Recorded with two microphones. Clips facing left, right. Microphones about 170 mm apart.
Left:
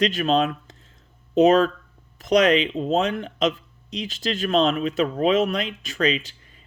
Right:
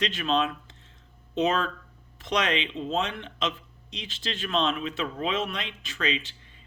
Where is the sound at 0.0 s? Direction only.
40° left (ahead or behind).